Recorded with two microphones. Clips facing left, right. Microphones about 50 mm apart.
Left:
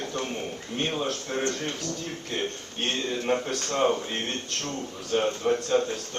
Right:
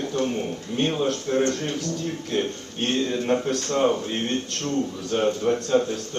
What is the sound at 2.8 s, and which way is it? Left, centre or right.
Speech, centre.